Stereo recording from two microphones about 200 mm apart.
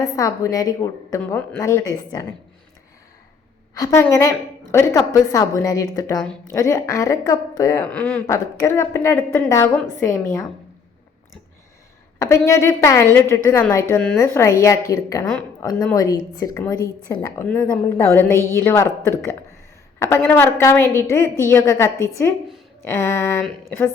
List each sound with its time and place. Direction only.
0.0 s a woman's voice: 15° left (ahead or behind)
3.8 s a woman's voice: 15° left (ahead or behind)
12.2 s a woman's voice: 15° left (ahead or behind)